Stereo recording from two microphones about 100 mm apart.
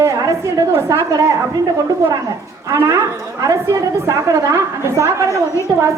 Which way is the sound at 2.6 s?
30° right (ahead or behind).